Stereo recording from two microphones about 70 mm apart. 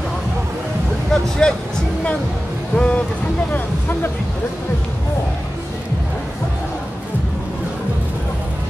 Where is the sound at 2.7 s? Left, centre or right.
Centre.